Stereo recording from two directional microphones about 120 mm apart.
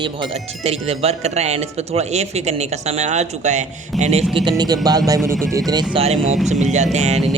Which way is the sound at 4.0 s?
65° right (ahead or behind).